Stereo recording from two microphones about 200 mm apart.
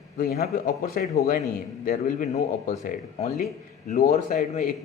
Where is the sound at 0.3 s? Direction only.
45° left (ahead or behind).